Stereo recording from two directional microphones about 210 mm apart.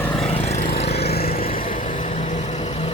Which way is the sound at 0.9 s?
50° left (ahead or behind).